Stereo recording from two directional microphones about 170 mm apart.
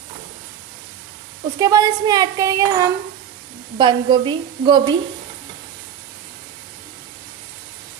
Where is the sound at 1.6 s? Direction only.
20° right (ahead or behind).